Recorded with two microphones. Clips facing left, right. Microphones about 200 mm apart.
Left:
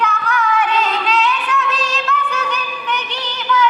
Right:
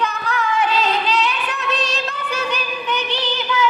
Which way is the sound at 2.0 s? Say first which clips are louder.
Left 3 dB; 30° right (ahead or behind).